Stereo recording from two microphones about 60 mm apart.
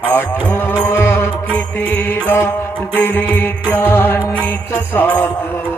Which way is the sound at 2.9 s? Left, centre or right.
Left.